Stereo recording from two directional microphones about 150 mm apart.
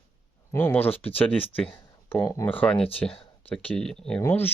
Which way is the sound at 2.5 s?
10° left (ahead or behind).